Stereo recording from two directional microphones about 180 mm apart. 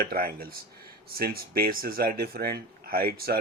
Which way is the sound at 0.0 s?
55° right (ahead or behind).